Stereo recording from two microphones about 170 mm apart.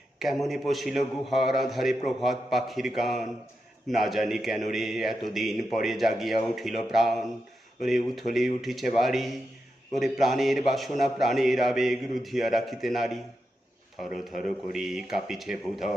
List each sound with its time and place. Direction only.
0.2 s a man's voice: centre (ahead or behind)
14.3 s a man's voice: centre (ahead or behind)